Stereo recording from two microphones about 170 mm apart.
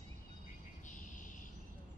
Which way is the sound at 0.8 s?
50° left (ahead or behind).